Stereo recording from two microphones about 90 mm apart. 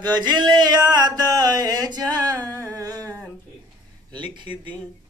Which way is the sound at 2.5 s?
40° right (ahead or behind).